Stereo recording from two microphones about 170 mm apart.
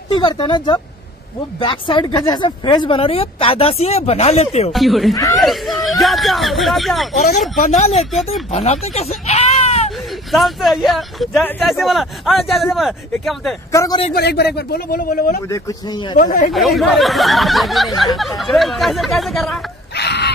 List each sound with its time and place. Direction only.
0.1 s speech: 25° left (ahead or behind)
4.7 s speech: centre (ahead or behind)
7.6 s speech: 40° left (ahead or behind)
9.8 s speech: centre (ahead or behind)
13.7 s a man's voice: 20° left (ahead or behind)
14.1 s speech: 70° left (ahead or behind); by 16.5 s 55° left (ahead or behind)
16.5 s speech: centre (ahead or behind)
20.0 s a sound: 80° left